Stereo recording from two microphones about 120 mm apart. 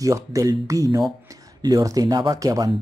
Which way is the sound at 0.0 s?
25° right (ahead or behind).